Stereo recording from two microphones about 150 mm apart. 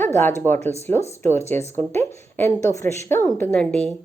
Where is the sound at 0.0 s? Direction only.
15° left (ahead or behind).